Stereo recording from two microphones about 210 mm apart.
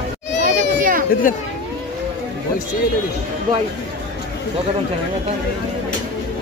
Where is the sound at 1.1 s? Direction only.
40° left (ahead or behind).